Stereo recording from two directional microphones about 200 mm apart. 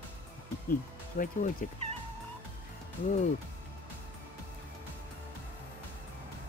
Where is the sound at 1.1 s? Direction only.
45° left (ahead or behind).